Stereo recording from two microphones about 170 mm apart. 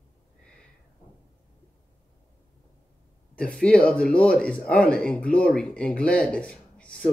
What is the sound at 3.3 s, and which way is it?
A man's voice, 5° left (ahead or behind).